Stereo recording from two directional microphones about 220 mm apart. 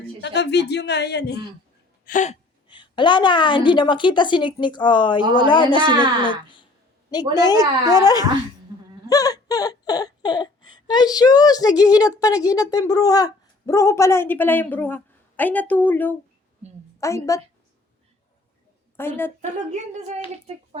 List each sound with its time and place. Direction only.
0.2 s speech: 50° left (ahead or behind)
2.0 s a woman's voice: 35° left (ahead or behind); by 7.3 s 20° left (ahead or behind)
7.6 s speech: 15° right (ahead or behind)
9.0 s a sound: 15° left (ahead or behind)
17.0 s a woman's voice: 15° left (ahead or behind)
18.9 s a woman's voice: 10° left (ahead or behind)
19.4 s speech: 35° right (ahead or behind)